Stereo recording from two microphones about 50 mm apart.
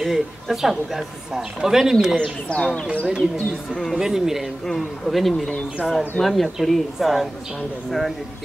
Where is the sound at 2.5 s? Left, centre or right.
Left.